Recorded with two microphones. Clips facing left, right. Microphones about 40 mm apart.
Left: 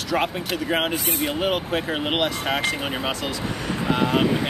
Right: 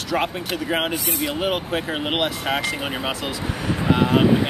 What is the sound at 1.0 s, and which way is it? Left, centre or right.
Speech, left.